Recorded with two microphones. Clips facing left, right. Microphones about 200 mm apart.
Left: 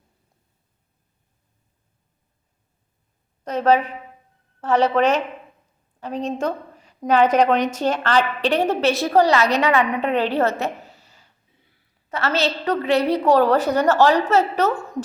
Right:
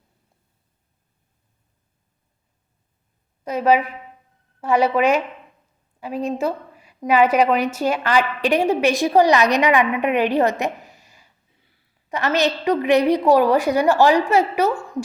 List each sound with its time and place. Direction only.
3.4 s a woman's voice: 10° right (ahead or behind)